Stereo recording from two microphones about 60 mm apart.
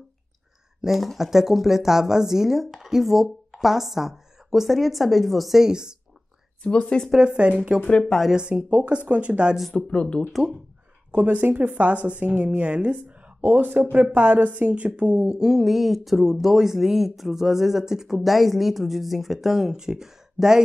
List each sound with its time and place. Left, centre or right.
0.7 s speech: centre
6.6 s speech: centre
7.1 s speech: centre
7.8 s speech: centre
8.4 s a woman's voice: centre
9.8 s speech: centre
11.1 s a woman's voice: right; by 20.6 s centre